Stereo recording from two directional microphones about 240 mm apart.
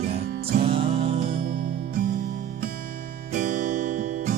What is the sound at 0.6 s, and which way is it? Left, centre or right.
Music, right.